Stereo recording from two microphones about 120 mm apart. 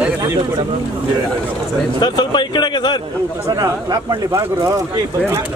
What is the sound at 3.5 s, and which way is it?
Speech, 30° right (ahead or behind).